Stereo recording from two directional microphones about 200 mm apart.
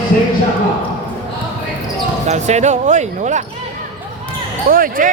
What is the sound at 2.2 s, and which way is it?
Speech, 35° right (ahead or behind).